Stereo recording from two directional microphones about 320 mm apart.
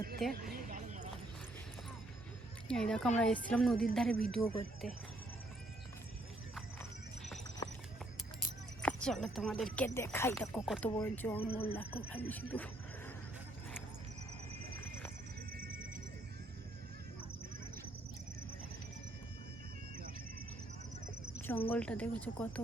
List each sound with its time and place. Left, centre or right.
0.2 s speech: centre
0.5 s a sound: right
2.6 s speech: centre
7.6 s horse: centre
8.8 s speech: centre
15.5 s music: right
21.7 s speech: centre